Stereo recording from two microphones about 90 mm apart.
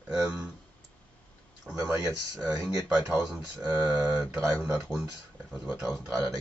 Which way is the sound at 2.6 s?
25° right (ahead or behind).